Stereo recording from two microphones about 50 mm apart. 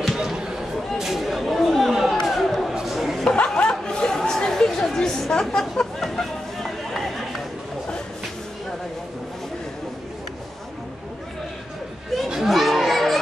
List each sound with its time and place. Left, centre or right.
0.2 s chatter: centre
2.0 s a sound: centre
2.7 s chatter: centre
3.3 s chatter: centre
12.3 s chatter: centre